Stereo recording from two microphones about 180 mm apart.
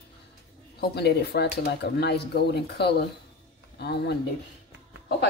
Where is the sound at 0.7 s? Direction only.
65° left (ahead or behind).